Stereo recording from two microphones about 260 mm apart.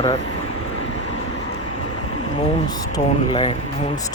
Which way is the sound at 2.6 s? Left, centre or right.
Centre.